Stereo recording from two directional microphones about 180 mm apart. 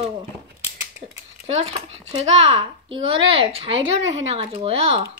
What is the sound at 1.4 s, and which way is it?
A child's voice, 35° right (ahead or behind).